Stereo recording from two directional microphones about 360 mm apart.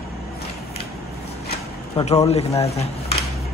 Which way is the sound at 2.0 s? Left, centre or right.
Centre.